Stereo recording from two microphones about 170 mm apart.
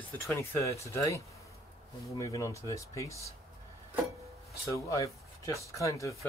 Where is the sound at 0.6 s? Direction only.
15° left (ahead or behind).